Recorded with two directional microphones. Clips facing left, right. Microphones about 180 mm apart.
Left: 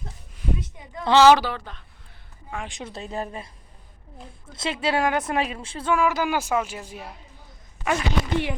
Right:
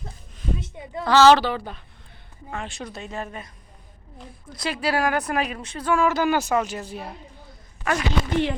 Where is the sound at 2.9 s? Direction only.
35° left (ahead or behind).